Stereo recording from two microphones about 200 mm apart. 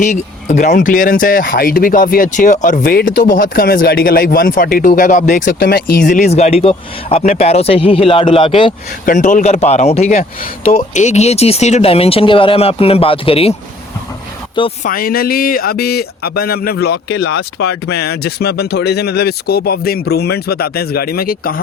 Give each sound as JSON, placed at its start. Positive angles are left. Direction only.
{"t": 0.0, "sound": "speech", "side_deg": 40}
{"t": 9.0, "sound": "speech", "side_deg": 40}
{"t": 10.2, "sound": "speech", "side_deg": 45}
{"t": 14.8, "sound": "speech", "side_deg": 45}